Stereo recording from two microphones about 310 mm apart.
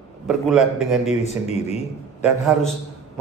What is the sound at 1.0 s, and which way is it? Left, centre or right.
Speech, left.